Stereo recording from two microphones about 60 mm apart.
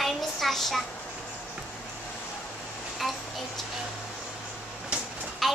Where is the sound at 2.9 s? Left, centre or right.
Centre.